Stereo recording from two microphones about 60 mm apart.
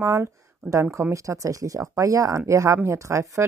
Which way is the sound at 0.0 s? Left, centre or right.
Right.